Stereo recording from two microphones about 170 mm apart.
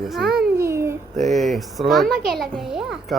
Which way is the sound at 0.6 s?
15° right (ahead or behind).